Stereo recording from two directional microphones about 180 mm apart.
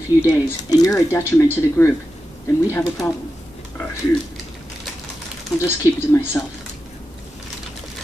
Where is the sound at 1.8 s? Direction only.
5° left (ahead or behind).